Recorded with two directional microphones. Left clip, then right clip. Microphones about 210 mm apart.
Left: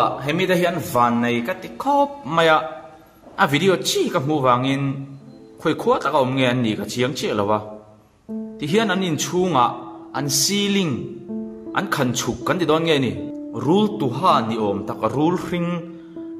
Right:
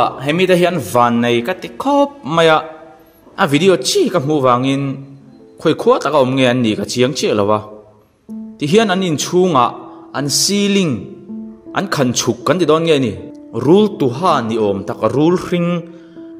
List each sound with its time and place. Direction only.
0.0 s a man's voice: 35° right (ahead or behind)